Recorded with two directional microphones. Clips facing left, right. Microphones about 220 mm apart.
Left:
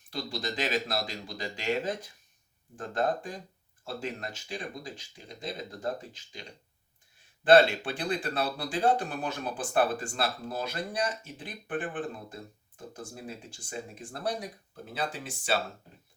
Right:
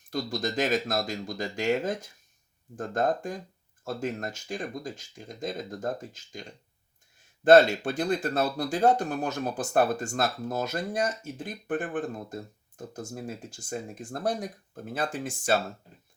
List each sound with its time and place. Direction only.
0.1 s speech: 45° right (ahead or behind)
7.4 s speech: 45° right (ahead or behind)